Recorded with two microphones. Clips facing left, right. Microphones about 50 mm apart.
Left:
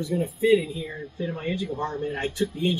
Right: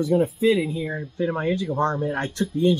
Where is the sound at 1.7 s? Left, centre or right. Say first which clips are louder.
Right 6 dB; right.